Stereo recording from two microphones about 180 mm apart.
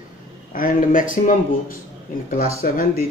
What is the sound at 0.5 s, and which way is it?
Speech, 50° left (ahead or behind).